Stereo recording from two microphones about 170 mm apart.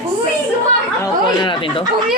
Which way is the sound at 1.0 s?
30° left (ahead or behind).